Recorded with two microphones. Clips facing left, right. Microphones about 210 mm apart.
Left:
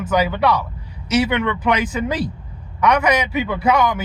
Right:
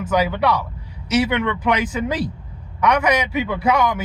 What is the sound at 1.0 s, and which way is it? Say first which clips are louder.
Speech: left 1 dB; 10° right (ahead or behind).